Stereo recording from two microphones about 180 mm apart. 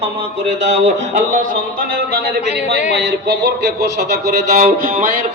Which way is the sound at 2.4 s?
35° left (ahead or behind).